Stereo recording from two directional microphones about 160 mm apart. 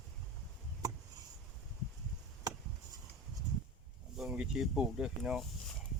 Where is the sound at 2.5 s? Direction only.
20° right (ahead or behind).